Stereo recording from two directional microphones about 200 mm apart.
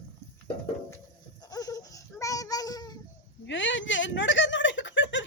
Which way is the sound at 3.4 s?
70° left (ahead or behind).